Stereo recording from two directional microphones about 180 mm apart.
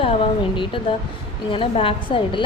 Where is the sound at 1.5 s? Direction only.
30° left (ahead or behind).